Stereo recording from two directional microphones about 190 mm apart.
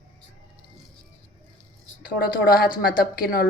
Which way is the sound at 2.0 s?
50° left (ahead or behind).